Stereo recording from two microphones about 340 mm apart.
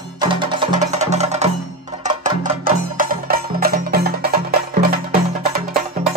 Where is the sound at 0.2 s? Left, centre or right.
Centre.